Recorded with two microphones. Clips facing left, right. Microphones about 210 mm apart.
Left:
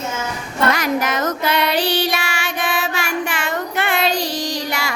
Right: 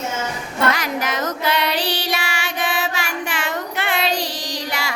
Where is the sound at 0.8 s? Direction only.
50° left (ahead or behind).